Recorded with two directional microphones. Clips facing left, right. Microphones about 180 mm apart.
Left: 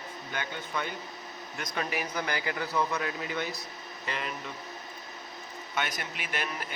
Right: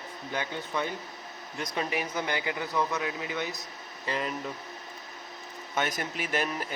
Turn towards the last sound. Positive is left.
turn(degrees=-45)  # may be behind; listen again after turning